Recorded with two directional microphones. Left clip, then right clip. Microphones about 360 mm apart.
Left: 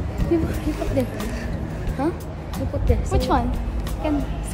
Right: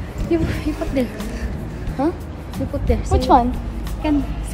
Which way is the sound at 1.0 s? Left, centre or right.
Right.